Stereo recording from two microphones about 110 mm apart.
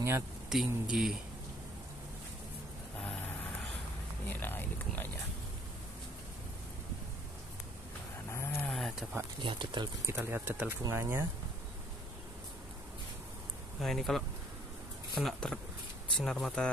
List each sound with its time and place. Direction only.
0.5 s speech: 5° right (ahead or behind)
4.3 s speech: 20° left (ahead or behind)
8.3 s a sound: 20° left (ahead or behind)
8.6 s a sound: 5° left (ahead or behind)
9.4 s speech: 50° right (ahead or behind)
10.0 s speech: 25° right (ahead or behind)
13.7 s speech: centre (ahead or behind)